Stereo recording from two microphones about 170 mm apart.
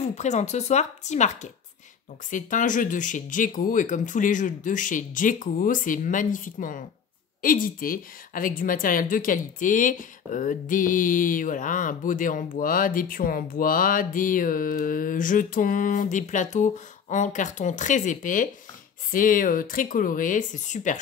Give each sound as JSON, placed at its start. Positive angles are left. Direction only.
{"t": 0.1, "sound": "a woman's voice", "side_deg": 45}